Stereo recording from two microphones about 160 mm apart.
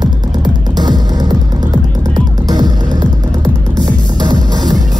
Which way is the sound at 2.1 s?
25° right (ahead or behind).